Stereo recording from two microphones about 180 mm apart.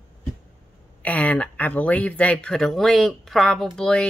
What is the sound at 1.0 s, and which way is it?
Speech, 10° left (ahead or behind).